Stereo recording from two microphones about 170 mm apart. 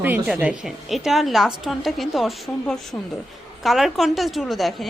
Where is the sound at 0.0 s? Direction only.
5° right (ahead or behind).